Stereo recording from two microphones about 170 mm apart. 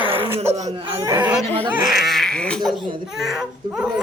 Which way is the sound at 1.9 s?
Centre (ahead or behind).